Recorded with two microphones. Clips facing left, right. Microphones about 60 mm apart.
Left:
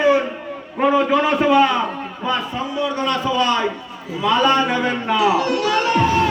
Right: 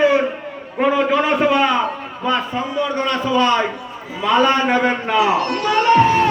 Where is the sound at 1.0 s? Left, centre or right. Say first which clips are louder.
Right 1 dB; right.